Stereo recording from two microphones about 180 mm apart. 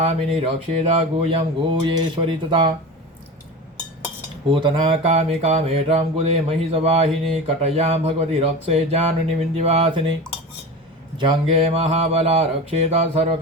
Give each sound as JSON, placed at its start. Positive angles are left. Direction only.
{"t": 0.0, "sound": "mantra", "side_deg": -35}
{"t": 4.4, "sound": "mantra", "side_deg": -30}
{"t": 11.2, "sound": "mantra", "side_deg": -30}